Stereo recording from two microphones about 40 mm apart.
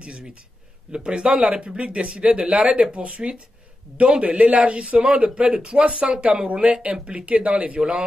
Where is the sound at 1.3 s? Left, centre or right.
Right.